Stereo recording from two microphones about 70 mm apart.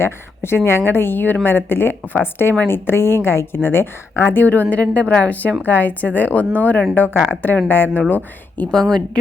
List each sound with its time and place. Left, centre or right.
0.0 s a woman's voice: left
6.4 s speech: right
6.9 s a woman's voice: left
8.7 s a woman's voice: centre